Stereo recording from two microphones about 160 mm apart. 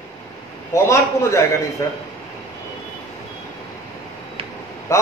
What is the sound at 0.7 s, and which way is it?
A man's voice, 20° left (ahead or behind).